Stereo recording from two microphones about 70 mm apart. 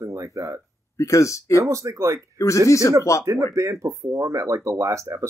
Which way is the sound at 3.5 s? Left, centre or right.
Right.